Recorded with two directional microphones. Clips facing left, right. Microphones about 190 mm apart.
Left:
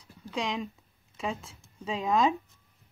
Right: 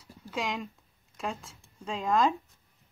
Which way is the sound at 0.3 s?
Centre (ahead or behind).